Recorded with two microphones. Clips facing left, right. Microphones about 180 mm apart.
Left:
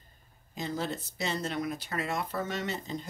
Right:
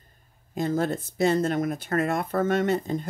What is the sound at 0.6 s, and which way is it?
Speech, 50° right (ahead or behind).